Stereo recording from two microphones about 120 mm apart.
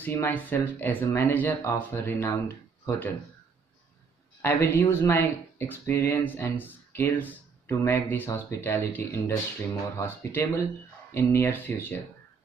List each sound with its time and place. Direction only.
0.0 s speech: 15° left (ahead or behind)
4.4 s speech: 20° left (ahead or behind)